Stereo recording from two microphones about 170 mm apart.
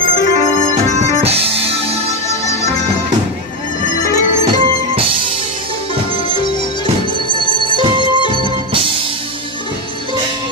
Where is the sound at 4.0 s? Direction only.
20° left (ahead or behind).